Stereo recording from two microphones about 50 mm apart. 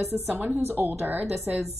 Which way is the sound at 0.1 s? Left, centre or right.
Centre.